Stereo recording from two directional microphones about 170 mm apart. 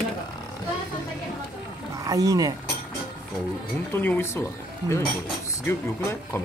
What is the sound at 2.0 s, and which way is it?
Speech, 20° right (ahead or behind).